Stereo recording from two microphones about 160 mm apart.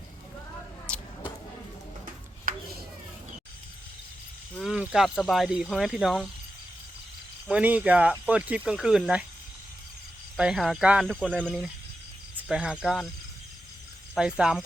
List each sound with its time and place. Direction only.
0.9 s a sound: 5° left (ahead or behind)
2.5 s a sound: 60° right (ahead or behind)
4.7 s speech: 5° right (ahead or behind)
7.4 s cricket: 10° right (ahead or behind)
8.3 s speech: 10° right (ahead or behind)
10.3 s speech: 5° right (ahead or behind)
12.4 s speech: 5° right (ahead or behind)
14.2 s speech: 5° right (ahead or behind)